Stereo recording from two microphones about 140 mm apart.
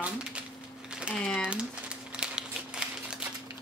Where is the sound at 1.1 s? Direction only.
5° left (ahead or behind).